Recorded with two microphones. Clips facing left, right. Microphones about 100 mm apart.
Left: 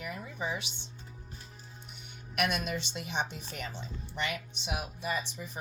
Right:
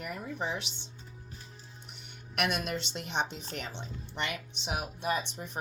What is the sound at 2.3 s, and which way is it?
Speech, 60° right (ahead or behind).